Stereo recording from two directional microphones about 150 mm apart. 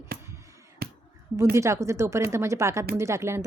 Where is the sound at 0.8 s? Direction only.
90° right.